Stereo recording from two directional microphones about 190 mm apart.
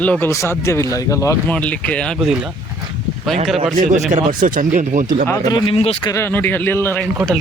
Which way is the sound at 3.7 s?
40° right (ahead or behind).